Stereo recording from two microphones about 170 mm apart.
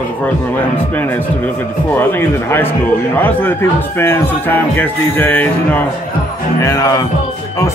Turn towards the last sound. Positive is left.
turn(degrees=20)  # may be behind; listen again after turning